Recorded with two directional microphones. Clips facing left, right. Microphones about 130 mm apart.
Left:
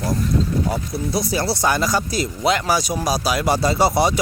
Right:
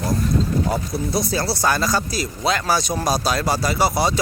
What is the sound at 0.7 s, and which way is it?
Speech, 10° left (ahead or behind).